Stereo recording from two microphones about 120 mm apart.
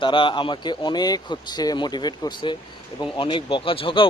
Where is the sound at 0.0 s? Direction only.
45° left (ahead or behind).